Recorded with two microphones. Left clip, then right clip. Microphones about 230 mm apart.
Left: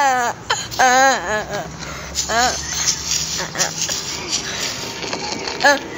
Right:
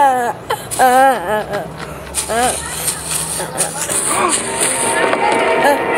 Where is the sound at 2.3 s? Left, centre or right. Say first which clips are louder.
Right 2 dB; centre.